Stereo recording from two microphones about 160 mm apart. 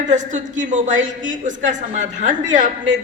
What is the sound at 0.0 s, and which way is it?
A woman's voice, 50° right (ahead or behind).